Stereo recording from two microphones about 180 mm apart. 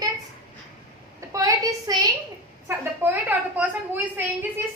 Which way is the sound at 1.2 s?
20° right (ahead or behind).